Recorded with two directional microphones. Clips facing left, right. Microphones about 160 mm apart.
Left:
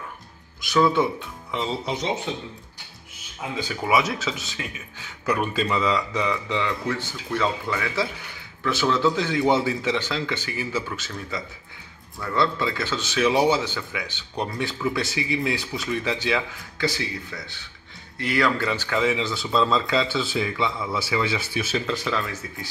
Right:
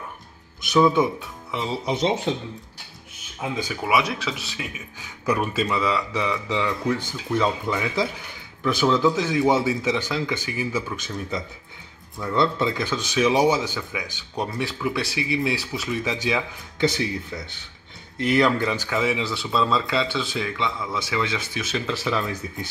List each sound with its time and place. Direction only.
0.7 s speech: 20° right (ahead or behind)
1.5 s speech: 5° right (ahead or behind)
3.6 s speech: centre (ahead or behind)
4.6 s speech: 10° right (ahead or behind)
22.2 s speech: 20° right (ahead or behind)